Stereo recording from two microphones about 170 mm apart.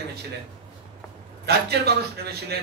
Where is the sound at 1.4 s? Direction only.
70° right (ahead or behind).